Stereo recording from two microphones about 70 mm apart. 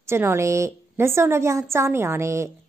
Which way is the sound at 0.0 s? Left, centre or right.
Right.